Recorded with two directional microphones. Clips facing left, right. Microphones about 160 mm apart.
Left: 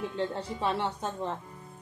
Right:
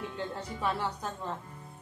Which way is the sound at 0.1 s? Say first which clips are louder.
Left 5 dB; 30° left (ahead or behind).